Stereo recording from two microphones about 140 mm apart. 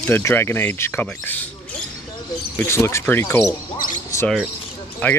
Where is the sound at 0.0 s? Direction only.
15° left (ahead or behind).